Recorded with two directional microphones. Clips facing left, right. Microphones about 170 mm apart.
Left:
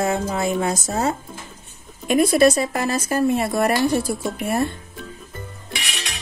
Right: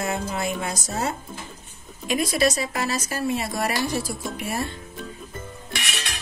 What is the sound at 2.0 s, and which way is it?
Speech, 55° left (ahead or behind).